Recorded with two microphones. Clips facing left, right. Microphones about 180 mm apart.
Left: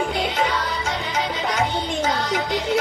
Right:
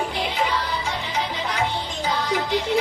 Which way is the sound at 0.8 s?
90° left.